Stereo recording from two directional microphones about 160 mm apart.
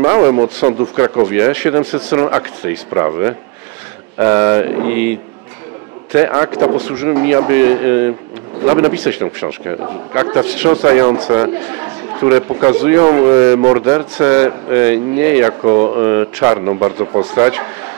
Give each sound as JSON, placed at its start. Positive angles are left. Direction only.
{"t": 0.0, "sound": "a man's voice", "side_deg": -20}
{"t": 1.8, "sound": "a man's voice", "side_deg": -25}
{"t": 6.1, "sound": "a man's voice", "side_deg": -20}
{"t": 15.6, "sound": "speech", "side_deg": -30}
{"t": 16.1, "sound": "a man's voice", "side_deg": -20}